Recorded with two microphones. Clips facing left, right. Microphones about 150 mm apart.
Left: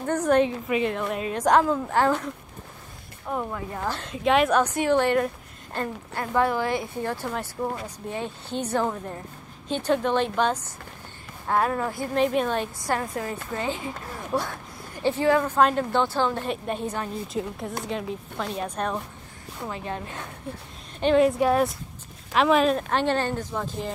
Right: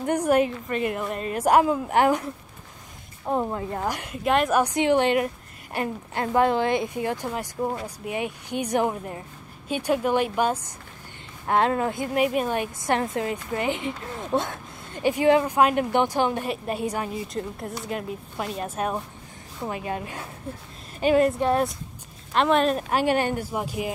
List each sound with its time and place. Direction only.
0.0 s a woman's voice: 10° right (ahead or behind)
3.3 s a woman's voice: 30° right (ahead or behind)
3.8 s a woman's voice: 15° right (ahead or behind)
11.4 s a woman's voice: 25° right (ahead or behind)
17.3 s a woman's voice: centre (ahead or behind)
22.8 s a woman's voice: 10° right (ahead or behind)